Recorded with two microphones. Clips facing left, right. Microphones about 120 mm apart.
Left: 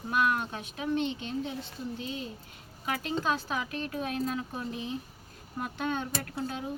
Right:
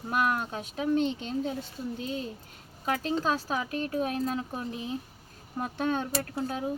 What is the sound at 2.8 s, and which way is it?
Speech, 35° right (ahead or behind).